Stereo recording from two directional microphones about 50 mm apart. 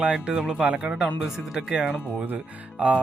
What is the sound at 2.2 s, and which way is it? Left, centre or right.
Speech, right.